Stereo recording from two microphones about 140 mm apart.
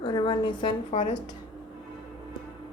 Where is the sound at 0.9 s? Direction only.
60° left (ahead or behind).